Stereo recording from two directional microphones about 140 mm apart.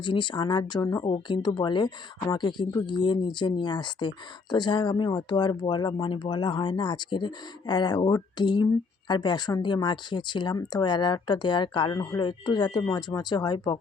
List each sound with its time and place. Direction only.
0.0 s speech: 35° left (ahead or behind)
1.0 s speech: 35° left (ahead or behind)